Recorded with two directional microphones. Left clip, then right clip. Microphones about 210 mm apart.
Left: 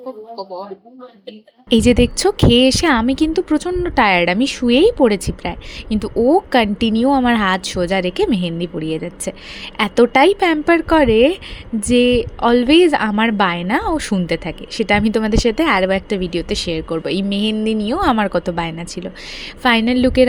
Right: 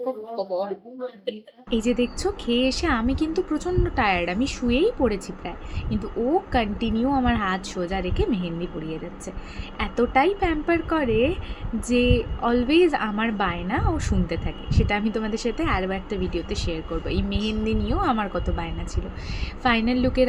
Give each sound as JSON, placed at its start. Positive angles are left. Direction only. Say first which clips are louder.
{"t": 0.3, "sound": "speech", "louder": "right 2 dB", "side_deg": 10}
{"t": 1.7, "sound": "speech", "louder": "left 10 dB", "side_deg": 50}